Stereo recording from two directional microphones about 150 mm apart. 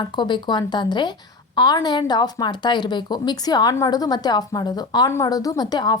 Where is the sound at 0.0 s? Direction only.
30° left (ahead or behind).